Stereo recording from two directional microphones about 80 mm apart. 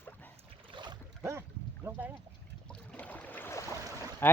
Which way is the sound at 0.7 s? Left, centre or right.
Right.